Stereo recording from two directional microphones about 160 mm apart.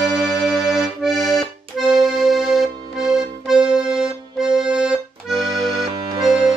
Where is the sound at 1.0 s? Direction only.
Centre (ahead or behind).